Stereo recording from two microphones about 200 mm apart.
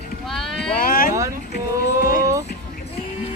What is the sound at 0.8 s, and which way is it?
Speech, 45° left (ahead or behind).